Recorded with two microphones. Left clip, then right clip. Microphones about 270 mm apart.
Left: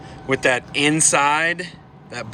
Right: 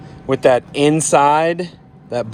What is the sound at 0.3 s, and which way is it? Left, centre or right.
Speech, centre.